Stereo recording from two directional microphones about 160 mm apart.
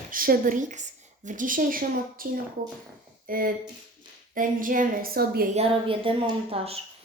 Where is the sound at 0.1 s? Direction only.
60° right (ahead or behind).